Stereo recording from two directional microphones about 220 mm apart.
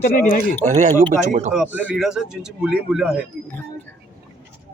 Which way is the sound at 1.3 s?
35° right (ahead or behind).